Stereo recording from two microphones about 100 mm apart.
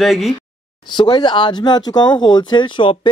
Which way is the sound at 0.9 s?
50° left (ahead or behind).